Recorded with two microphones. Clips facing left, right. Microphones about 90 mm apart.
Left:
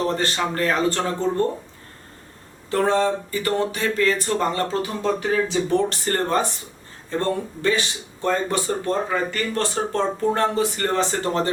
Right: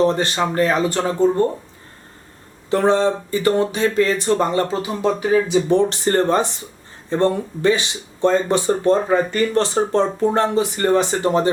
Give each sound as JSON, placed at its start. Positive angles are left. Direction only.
{"t": 0.0, "sound": "speech", "side_deg": -20}
{"t": 2.6, "sound": "speech", "side_deg": -20}